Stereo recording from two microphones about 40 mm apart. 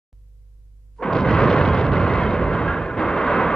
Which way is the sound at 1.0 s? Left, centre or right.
Centre.